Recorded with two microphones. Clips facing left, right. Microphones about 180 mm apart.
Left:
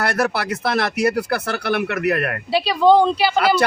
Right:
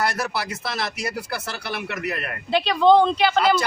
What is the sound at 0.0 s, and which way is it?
Speech, 60° left (ahead or behind).